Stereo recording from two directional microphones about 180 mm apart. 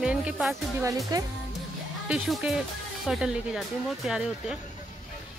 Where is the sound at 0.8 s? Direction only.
20° right (ahead or behind).